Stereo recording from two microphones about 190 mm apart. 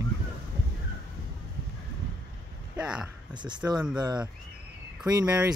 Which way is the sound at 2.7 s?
5° right (ahead or behind).